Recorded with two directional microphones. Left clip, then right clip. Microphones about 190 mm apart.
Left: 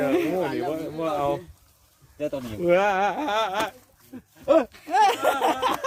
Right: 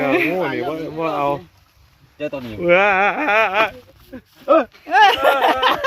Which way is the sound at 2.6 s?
35° right (ahead or behind).